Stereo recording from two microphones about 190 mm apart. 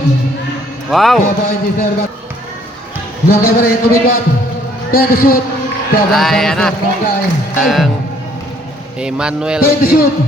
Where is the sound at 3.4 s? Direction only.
50° left (ahead or behind).